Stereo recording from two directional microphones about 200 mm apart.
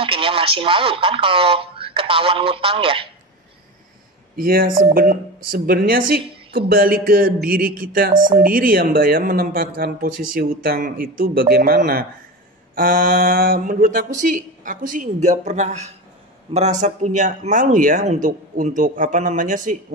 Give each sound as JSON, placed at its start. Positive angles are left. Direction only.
{"t": 0.0, "sound": "speech", "side_deg": -25}
{"t": 4.4, "sound": "speech", "side_deg": -45}